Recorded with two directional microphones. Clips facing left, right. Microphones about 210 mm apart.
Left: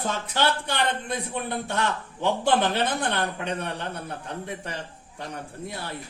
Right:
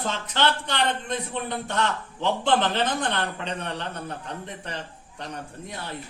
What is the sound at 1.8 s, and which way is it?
Speech, 10° left (ahead or behind).